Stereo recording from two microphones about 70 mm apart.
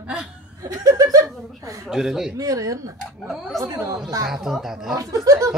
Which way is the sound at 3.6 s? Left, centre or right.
Right.